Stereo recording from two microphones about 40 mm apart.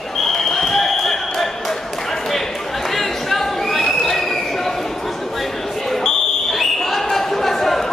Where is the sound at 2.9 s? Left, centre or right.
Centre.